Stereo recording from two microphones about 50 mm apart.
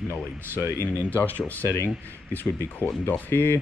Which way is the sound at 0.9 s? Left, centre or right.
Left.